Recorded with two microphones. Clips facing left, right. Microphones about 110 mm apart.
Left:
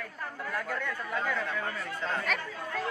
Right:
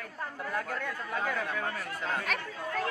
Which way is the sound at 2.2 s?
45° right (ahead or behind).